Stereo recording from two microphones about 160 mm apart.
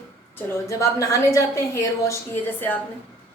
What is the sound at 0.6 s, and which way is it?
A woman's voice, 20° left (ahead or behind).